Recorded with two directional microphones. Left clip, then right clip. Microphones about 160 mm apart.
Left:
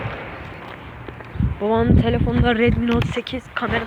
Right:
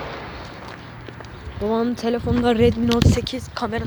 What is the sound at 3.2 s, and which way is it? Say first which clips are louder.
Speech: left 2 dB; 20° right (ahead or behind).